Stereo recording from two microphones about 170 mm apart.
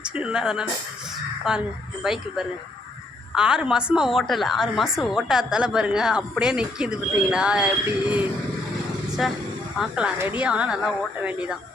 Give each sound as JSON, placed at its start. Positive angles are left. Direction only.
{"t": 0.0, "sound": "a woman's voice", "side_deg": -5}
{"t": 9.2, "sound": "a woman's voice", "side_deg": 0}